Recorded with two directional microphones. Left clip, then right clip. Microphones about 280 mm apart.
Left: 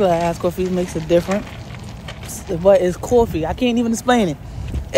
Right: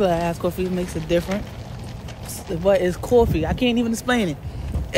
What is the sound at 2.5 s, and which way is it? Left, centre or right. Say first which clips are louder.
Speech: left 5 dB; centre.